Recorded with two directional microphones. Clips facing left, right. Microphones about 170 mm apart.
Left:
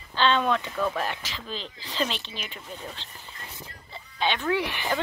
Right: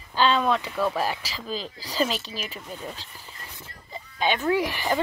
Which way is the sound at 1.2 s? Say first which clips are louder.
Right 4 dB; 35° right (ahead or behind).